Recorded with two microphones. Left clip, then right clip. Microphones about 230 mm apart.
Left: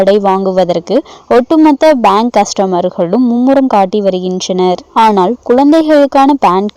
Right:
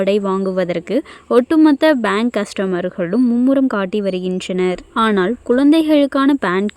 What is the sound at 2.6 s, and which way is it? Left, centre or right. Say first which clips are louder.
Speech: left 8 dB; left.